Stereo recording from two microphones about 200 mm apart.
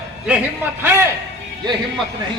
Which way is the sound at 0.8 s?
15° right (ahead or behind).